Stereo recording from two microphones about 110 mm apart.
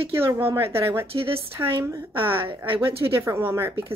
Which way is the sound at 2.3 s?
50° right (ahead or behind).